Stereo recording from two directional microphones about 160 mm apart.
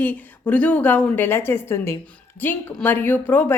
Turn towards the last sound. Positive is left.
turn(degrees=10)  # may be behind; listen again after turning